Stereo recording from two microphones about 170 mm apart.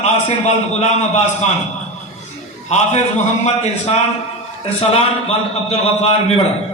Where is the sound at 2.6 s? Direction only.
40° left (ahead or behind).